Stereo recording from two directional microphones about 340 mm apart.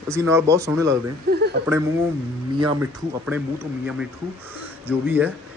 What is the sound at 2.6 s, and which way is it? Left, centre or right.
Speech, centre.